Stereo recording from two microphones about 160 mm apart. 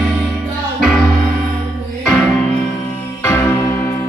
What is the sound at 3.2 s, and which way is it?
Music, 15° left (ahead or behind).